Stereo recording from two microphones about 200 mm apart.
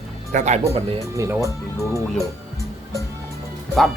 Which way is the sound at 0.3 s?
35° right (ahead or behind).